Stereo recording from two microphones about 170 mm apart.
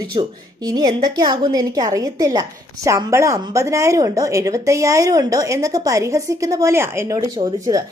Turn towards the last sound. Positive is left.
turn(degrees=-20)  # may be behind; listen again after turning